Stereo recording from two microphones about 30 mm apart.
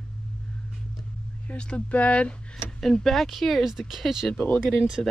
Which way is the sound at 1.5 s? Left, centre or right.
Left.